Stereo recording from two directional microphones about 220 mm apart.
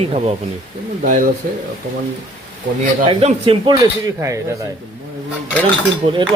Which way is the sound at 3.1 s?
25° right (ahead or behind).